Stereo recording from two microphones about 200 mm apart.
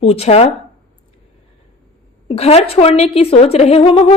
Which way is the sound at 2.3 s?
30° left (ahead or behind).